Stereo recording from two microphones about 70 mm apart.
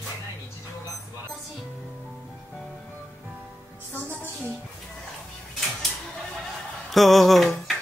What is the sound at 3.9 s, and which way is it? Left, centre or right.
Music, left.